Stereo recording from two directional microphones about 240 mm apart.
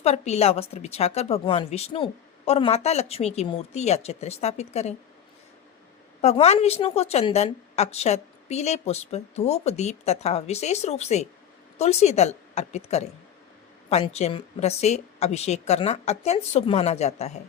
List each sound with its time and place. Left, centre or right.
0.0 s a woman's voice: left
6.2 s a woman's voice: left